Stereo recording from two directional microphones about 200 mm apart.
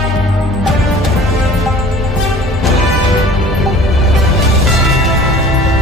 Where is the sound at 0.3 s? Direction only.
Centre (ahead or behind).